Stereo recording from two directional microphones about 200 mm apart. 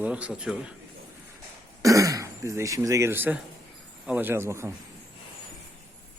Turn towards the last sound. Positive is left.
turn(degrees=-15)  # may be behind; listen again after turning